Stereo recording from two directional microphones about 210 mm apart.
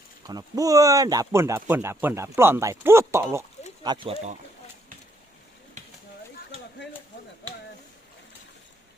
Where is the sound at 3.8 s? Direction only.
20° right (ahead or behind).